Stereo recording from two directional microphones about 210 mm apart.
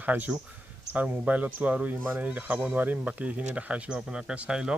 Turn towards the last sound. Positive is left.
turn(degrees=-5)  # may be behind; listen again after turning